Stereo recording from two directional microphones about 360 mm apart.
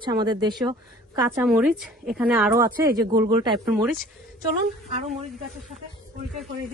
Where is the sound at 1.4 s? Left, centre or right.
Centre.